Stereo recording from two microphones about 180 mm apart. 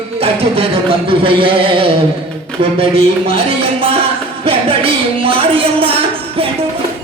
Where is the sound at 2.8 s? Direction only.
30° right (ahead or behind).